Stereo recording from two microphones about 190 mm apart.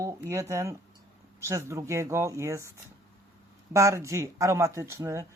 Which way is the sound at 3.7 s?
15° right (ahead or behind).